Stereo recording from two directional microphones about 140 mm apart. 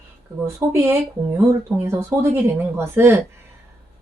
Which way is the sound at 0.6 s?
15° right (ahead or behind).